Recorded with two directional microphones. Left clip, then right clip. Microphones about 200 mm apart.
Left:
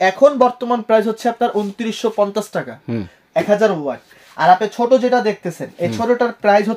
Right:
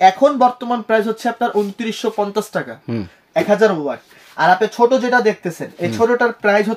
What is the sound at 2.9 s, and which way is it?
Speech, 5° left (ahead or behind).